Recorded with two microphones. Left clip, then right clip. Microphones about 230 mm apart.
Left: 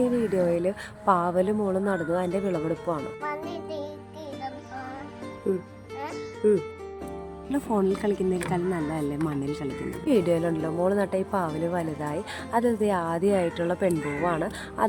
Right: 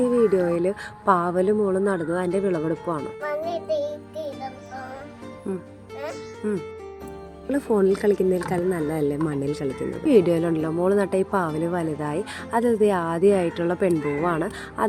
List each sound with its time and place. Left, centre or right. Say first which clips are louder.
0.3 s speech: right 3 dB; centre
2.6 s speech: right 2 dB; centre
6.4 s speech: left 6 dB; centre
10.1 s speech: right 5 dB; centre
13.9 s speech: right 4 dB; centre
14.3 s speech: right 2 dB; centre